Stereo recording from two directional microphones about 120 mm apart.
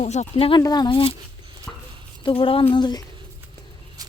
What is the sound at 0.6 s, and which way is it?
Speech, 35° left (ahead or behind).